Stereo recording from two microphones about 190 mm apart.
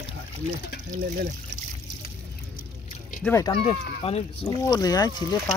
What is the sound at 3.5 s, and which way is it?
Speech, 30° left (ahead or behind).